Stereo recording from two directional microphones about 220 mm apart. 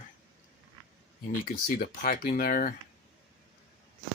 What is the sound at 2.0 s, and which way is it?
Speech, 40° left (ahead or behind).